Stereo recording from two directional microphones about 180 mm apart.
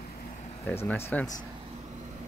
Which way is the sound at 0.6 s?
10° left (ahead or behind).